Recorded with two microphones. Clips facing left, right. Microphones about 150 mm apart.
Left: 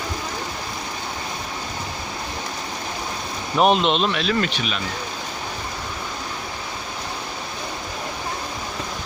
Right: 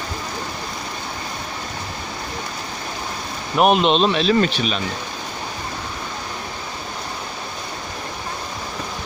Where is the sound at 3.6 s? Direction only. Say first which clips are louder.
Right 2 dB; 15° right (ahead or behind); by 4.8 s 35° right (ahead or behind).